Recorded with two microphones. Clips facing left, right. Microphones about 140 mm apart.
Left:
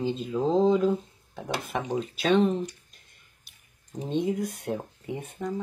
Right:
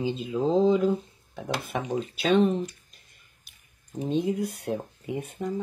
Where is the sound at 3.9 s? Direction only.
5° right (ahead or behind).